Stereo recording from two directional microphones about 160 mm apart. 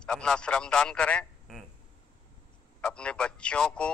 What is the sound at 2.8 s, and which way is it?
Speech, 5° left (ahead or behind).